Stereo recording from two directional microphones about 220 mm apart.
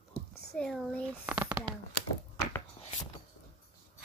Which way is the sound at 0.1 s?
45° left (ahead or behind).